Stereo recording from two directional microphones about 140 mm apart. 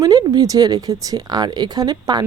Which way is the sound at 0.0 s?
25° right (ahead or behind).